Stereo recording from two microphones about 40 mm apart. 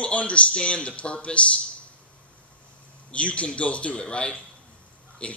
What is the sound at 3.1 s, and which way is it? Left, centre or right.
A man's voice, left.